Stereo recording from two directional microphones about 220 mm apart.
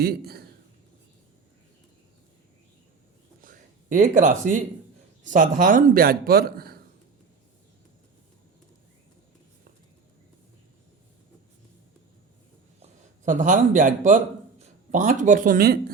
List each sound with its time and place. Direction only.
0.0 s a man's voice: 45° right (ahead or behind)
3.4 s a sound: 35° right (ahead or behind)
5.2 s a man's voice: 35° right (ahead or behind)
12.8 s a man's voice: 35° right (ahead or behind)